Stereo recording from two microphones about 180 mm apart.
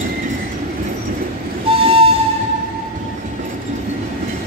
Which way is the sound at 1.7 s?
30° right (ahead or behind).